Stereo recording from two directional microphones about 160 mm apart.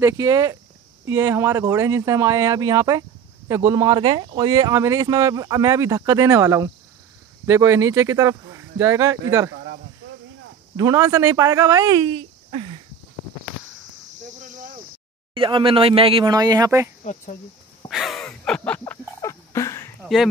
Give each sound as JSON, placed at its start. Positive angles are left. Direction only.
{"t": 0.0, "sound": "speech", "side_deg": -20}
{"t": 10.8, "sound": "speech", "side_deg": -20}
{"t": 14.4, "sound": "a sound", "side_deg": -55}
{"t": 15.3, "sound": "speech", "side_deg": -35}
{"t": 17.0, "sound": "speech", "side_deg": 45}
{"t": 17.8, "sound": "a sound", "side_deg": 0}
{"t": 19.2, "sound": "fowl", "side_deg": 20}